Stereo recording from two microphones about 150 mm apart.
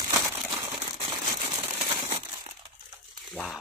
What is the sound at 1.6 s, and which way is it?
Crumpling, 15° right (ahead or behind).